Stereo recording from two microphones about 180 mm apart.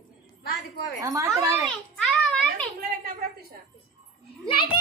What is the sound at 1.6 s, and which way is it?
Children playing, centre (ahead or behind).